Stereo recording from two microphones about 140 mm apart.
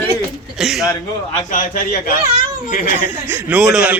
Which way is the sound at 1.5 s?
75° left (ahead or behind).